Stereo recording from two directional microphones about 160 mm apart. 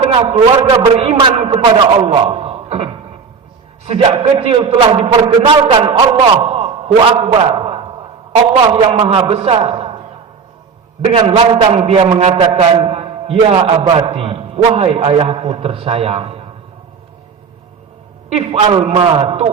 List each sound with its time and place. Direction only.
0.0 s a man's voice: 35° right (ahead or behind)
4.0 s a man's voice: 35° right (ahead or behind)
7.6 s a sound: 35° right (ahead or behind)
8.6 s a man's voice: 35° right (ahead or behind)
11.0 s a man's voice: 30° right (ahead or behind)
18.3 s a man's voice: 35° right (ahead or behind)